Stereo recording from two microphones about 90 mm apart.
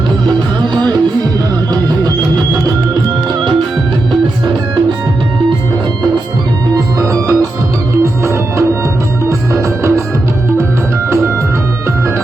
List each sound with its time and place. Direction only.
6.7 s music: 35° right (ahead or behind)